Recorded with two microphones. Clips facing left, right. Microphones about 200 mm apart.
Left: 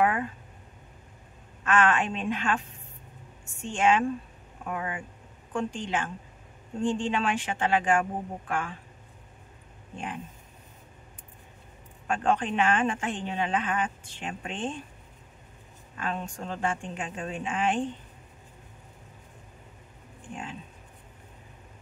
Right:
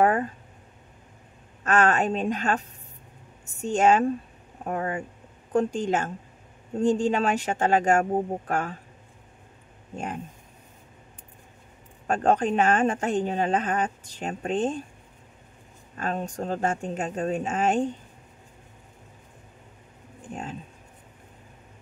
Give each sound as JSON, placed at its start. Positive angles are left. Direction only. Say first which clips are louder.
{"t": 0.0, "sound": "a sound", "louder": "right 4 dB", "side_deg": -40}
{"t": 1.6, "sound": "speech", "louder": "right 3 dB", "side_deg": -40}
{"t": 9.9, "sound": "speech", "louder": "right 4 dB", "side_deg": -45}
{"t": 12.1, "sound": "speech", "louder": "right 4 dB", "side_deg": -40}
{"t": 16.0, "sound": "speech", "louder": "right 4 dB", "side_deg": -40}